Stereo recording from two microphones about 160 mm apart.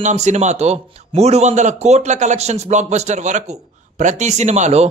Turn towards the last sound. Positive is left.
turn(degrees=-45)  # may be behind; listen again after turning